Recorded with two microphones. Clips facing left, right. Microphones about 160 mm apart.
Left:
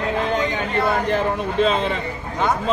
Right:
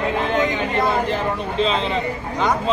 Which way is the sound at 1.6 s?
50° left (ahead or behind).